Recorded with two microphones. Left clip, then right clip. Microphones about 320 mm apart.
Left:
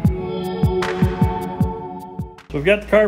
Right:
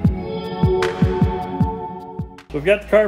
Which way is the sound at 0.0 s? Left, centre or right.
Centre.